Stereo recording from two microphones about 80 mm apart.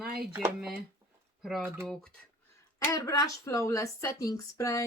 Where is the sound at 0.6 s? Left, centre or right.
Centre.